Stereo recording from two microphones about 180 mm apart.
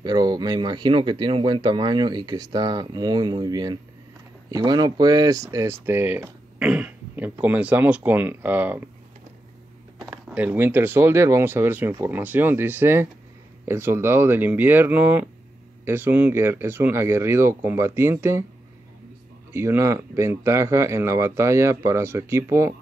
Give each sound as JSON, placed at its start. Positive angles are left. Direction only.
{"t": 0.0, "sound": "speech", "side_deg": -20}
{"t": 10.0, "sound": "speech", "side_deg": -10}
{"t": 19.5, "sound": "speech", "side_deg": -15}